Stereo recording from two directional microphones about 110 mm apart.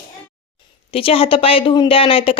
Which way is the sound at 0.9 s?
60° left (ahead or behind).